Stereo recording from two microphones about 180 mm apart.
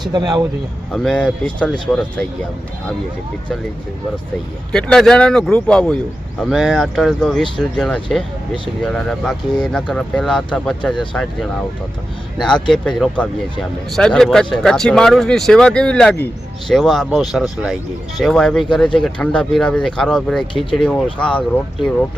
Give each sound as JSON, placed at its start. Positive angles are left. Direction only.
{"t": 0.0, "sound": "speech", "side_deg": -25}
{"t": 0.9, "sound": "speech", "side_deg": 5}
{"t": 4.7, "sound": "speech", "side_deg": 5}